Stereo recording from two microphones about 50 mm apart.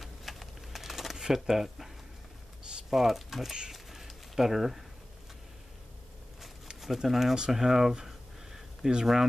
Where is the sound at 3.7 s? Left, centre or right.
Centre.